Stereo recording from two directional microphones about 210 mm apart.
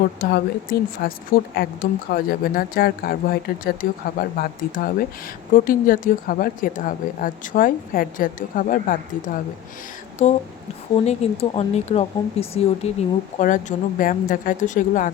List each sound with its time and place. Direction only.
0.2 s speech: 45° left (ahead or behind)